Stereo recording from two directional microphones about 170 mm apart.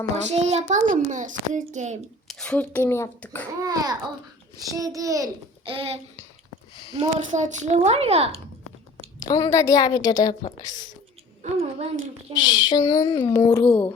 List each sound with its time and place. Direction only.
0.3 s a child's voice: 40° right (ahead or behind)
2.2 s speech: 5° left (ahead or behind)
3.6 s a child's voice: 20° right (ahead or behind)
5.6 s a child's voice: 35° right (ahead or behind)
9.3 s a child's voice: 20° left (ahead or behind)
11.5 s a child's voice: 40° right (ahead or behind)
12.3 s a child's voice: 25° left (ahead or behind)